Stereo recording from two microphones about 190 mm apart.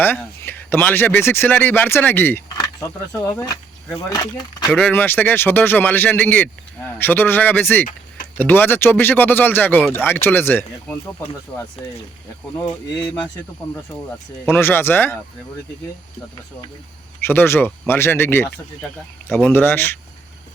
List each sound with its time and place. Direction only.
0.0 s speech: 10° left (ahead or behind)
4.7 s speech: 10° left (ahead or behind)
13.0 s speech: 5° left (ahead or behind)
14.4 s speech: 10° left (ahead or behind)
17.2 s speech: 10° left (ahead or behind)